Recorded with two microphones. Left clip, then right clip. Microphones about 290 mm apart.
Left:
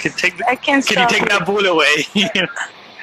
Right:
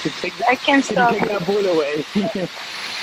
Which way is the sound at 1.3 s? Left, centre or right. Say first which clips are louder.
Left 4 dB; left.